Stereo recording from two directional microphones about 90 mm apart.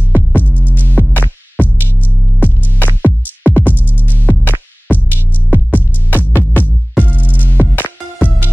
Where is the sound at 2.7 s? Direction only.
20° left (ahead or behind).